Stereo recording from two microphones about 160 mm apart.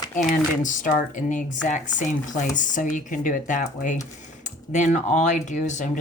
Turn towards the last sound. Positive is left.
turn(degrees=50)  # may be behind; listen again after turning